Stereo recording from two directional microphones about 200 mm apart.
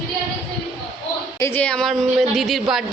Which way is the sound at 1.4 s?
10° left (ahead or behind).